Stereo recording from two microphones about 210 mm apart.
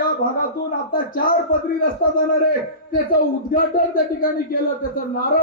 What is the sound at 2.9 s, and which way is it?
Speech, 45° left (ahead or behind).